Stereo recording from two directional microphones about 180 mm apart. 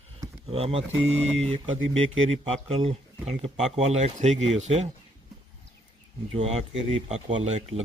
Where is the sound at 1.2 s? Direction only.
5° left (ahead or behind).